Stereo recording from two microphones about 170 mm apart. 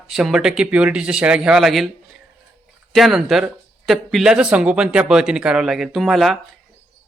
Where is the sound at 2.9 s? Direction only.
Centre (ahead or behind).